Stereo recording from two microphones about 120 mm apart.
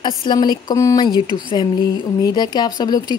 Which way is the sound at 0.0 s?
40° left (ahead or behind).